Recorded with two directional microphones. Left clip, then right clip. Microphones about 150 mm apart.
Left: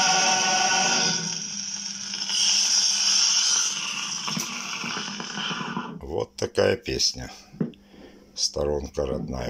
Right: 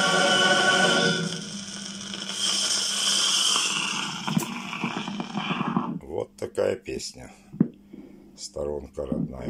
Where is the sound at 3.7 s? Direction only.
65° right (ahead or behind).